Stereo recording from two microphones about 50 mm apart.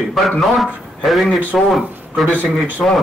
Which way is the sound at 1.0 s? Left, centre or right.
Centre.